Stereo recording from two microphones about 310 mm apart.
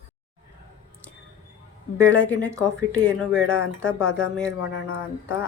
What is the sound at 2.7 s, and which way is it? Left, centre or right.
Speech, centre.